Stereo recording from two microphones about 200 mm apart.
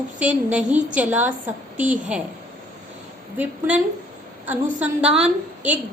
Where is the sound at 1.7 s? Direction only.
40° right (ahead or behind).